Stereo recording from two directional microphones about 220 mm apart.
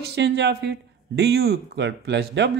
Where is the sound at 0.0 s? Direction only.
50° right (ahead or behind).